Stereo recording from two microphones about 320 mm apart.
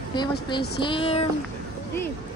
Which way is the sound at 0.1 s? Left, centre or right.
Centre.